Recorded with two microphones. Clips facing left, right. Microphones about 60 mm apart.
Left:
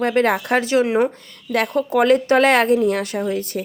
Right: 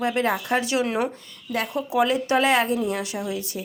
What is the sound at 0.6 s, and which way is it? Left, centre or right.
Speech, left.